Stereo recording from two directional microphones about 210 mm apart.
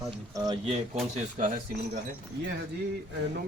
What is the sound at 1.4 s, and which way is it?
Speech, 40° right (ahead or behind).